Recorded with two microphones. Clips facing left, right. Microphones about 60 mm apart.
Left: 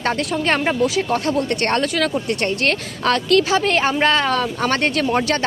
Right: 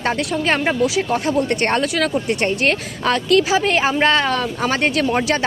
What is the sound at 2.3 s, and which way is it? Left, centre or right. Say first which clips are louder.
Speech: right 2 dB; centre.